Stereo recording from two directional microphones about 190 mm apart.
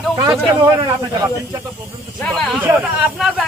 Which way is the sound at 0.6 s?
20° right (ahead or behind).